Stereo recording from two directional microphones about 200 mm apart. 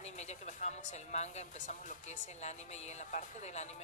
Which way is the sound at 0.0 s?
35° left (ahead or behind).